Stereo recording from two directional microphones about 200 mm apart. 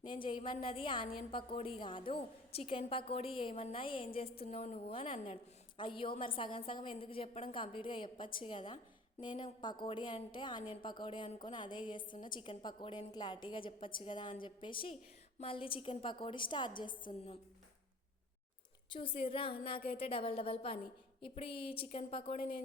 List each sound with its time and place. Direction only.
0.0 s a woman's voice: 25° left (ahead or behind)
18.9 s a woman's voice: 25° left (ahead or behind)